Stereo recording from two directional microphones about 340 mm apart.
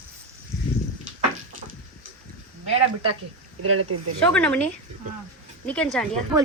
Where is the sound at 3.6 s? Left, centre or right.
Right.